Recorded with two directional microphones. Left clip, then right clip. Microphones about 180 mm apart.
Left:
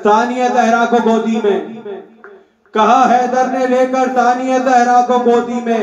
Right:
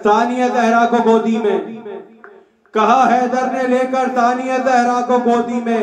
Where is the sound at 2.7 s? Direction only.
20° left (ahead or behind).